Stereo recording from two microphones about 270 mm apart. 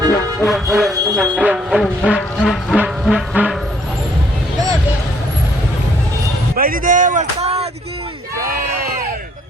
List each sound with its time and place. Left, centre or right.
0.4 s music: centre
6.6 s a sound: right
8.4 s crowd: right